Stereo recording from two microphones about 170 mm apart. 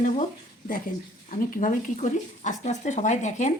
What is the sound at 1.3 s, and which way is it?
Speech, 55° left (ahead or behind).